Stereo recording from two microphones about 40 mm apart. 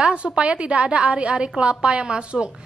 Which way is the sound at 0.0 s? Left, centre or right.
Right.